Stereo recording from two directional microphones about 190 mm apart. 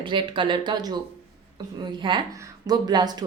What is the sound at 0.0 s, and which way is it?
Speech, 25° right (ahead or behind).